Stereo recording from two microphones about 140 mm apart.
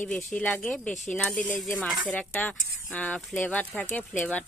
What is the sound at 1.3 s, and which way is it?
Speech, 15° left (ahead or behind).